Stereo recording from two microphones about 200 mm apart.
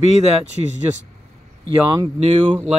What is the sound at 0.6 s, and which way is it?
Speech, 25° right (ahead or behind).